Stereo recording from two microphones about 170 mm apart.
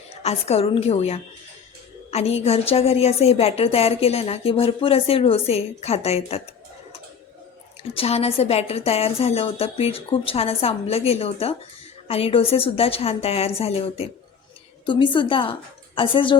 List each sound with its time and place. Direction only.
0.2 s a woman's voice: 35° left (ahead or behind)
7.9 s a woman's voice: 35° left (ahead or behind)